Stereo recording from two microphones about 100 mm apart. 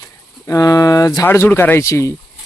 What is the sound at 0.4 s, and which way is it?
Speech, 35° left (ahead or behind).